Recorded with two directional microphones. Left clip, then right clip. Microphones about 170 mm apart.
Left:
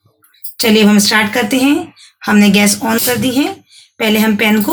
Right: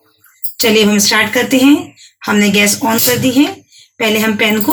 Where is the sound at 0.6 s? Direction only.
25° left (ahead or behind).